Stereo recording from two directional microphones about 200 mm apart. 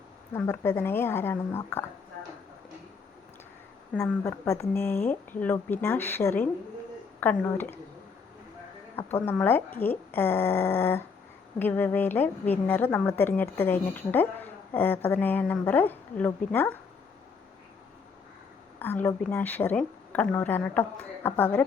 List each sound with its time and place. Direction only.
0.3 s a woman's voice: 10° left (ahead or behind)
4.2 s a woman's voice: 15° left (ahead or behind)
9.0 s a woman's voice: 10° left (ahead or behind)
18.8 s a woman's voice: 10° left (ahead or behind)